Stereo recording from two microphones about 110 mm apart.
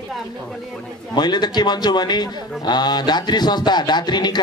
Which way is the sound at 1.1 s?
40° left (ahead or behind).